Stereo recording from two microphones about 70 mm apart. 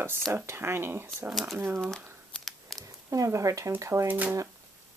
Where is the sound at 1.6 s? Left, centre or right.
Right.